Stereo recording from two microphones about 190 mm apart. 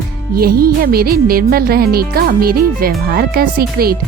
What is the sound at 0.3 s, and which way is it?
Speech, 50° right (ahead or behind).